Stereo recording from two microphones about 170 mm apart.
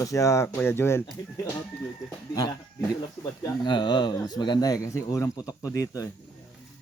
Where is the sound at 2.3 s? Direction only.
20° left (ahead or behind).